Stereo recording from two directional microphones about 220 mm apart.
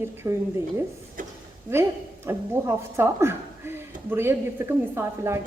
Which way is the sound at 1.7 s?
10° right (ahead or behind).